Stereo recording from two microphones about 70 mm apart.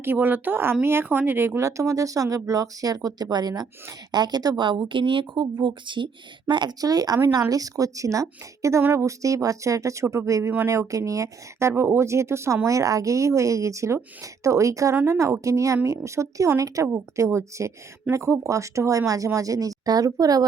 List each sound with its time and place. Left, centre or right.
0.0 s speech: right
3.2 s a woman's voice: right
5.3 s speech: right
6.0 s a woman's voice: right
12.6 s speech: right
16.8 s speech: right